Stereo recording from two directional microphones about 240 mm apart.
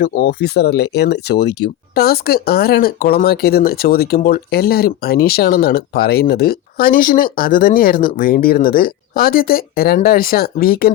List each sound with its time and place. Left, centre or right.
0.0 s speech: left